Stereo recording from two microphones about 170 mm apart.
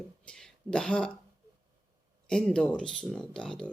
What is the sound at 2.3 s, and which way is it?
Speech, 5° left (ahead or behind).